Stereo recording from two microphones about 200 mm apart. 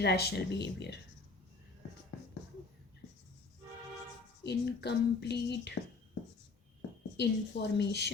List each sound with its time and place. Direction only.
0.0 s speech: 55° left (ahead or behind)
4.4 s speech: 55° left (ahead or behind)
7.2 s speech: 60° left (ahead or behind)